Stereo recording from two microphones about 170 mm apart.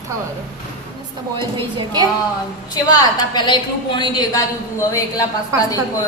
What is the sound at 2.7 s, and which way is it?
A woman's voice, 25° left (ahead or behind).